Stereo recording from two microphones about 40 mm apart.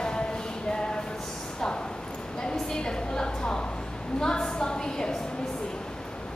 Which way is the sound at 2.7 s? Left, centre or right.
Centre.